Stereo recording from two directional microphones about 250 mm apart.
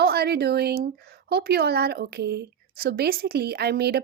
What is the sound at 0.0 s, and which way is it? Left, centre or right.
Speech, right.